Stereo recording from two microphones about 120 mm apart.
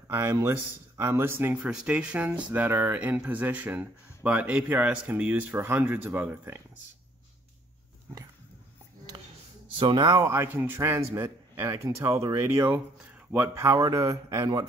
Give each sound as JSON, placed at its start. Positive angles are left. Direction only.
{"t": 0.1, "sound": "speech", "side_deg": -20}
{"t": 1.6, "sound": "speech", "side_deg": -5}
{"t": 9.8, "sound": "speech", "side_deg": -40}
{"t": 10.2, "sound": "speech", "side_deg": -20}